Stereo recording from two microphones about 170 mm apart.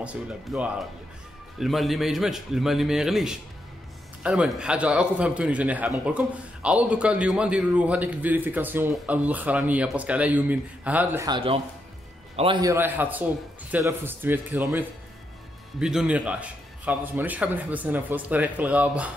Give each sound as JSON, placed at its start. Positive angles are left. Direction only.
{"t": 0.0, "sound": "a man's voice", "side_deg": -5}
{"t": 11.2, "sound": "speech", "side_deg": -30}
{"t": 12.6, "sound": "a man's voice", "side_deg": -10}
{"t": 15.8, "sound": "a man's voice", "side_deg": -5}